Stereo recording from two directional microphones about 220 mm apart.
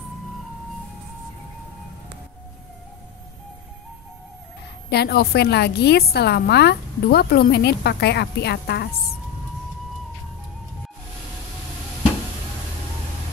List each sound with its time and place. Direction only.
4.8 s a woman's voice: 45° left (ahead or behind)